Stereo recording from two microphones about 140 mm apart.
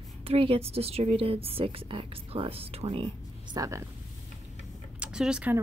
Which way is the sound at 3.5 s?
25° right (ahead or behind).